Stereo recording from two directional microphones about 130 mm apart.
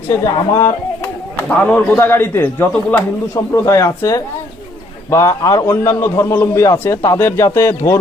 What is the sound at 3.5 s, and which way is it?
A man's voice, 25° left (ahead or behind).